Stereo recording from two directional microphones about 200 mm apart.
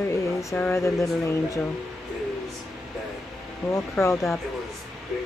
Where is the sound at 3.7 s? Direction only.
15° left (ahead or behind).